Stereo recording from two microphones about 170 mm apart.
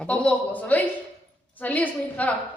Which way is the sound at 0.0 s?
5° left (ahead or behind).